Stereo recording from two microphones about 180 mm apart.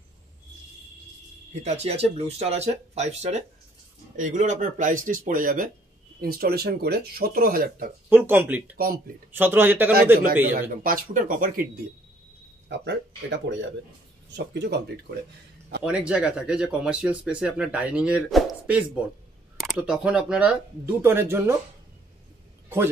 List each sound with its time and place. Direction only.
1.5 s speech: 40° right (ahead or behind)
8.1 s speech: 10° right (ahead or behind)
8.7 s speech: 55° right (ahead or behind)
9.3 s speech: 10° right (ahead or behind)
10.2 s speech: 50° right (ahead or behind)
12.6 s speech: 75° right (ahead or behind)
15.8 s speech: 5° right (ahead or behind)